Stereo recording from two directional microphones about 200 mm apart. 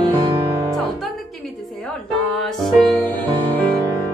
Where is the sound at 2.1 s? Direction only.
Centre (ahead or behind).